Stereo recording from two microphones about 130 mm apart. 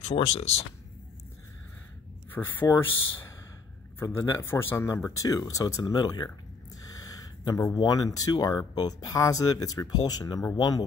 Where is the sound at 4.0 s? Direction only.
20° left (ahead or behind).